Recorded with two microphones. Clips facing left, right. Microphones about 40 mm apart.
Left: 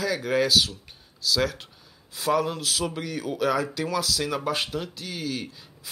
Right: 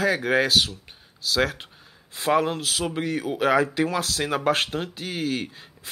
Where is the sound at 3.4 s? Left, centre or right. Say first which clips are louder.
Right 4 dB; right.